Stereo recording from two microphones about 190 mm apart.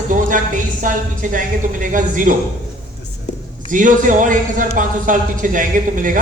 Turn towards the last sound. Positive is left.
turn(degrees=-45)  # may be behind; listen again after turning